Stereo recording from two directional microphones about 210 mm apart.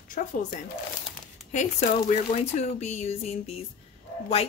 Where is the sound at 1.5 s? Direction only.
35° left (ahead or behind).